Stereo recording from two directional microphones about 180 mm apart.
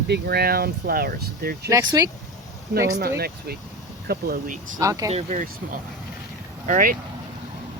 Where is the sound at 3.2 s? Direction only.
60° right (ahead or behind).